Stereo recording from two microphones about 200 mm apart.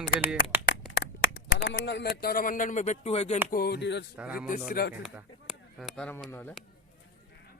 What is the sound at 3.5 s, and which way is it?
Speech, 55° left (ahead or behind).